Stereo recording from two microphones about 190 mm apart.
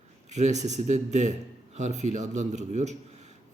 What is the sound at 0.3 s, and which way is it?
Speech, 35° right (ahead or behind).